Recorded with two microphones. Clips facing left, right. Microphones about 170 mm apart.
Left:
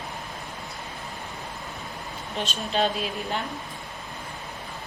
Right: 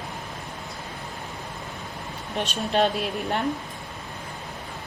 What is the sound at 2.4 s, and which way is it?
A woman's voice, 60° right (ahead or behind).